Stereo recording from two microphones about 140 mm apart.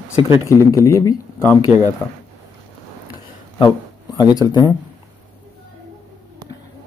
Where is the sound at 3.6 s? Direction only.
30° left (ahead or behind).